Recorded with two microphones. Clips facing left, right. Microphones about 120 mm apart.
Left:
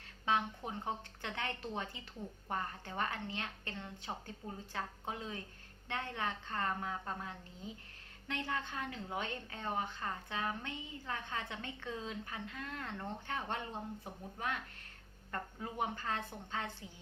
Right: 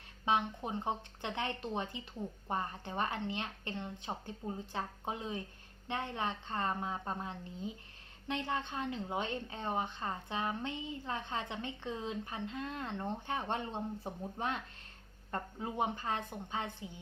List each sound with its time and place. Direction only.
0.3 s a woman's voice: 20° right (ahead or behind)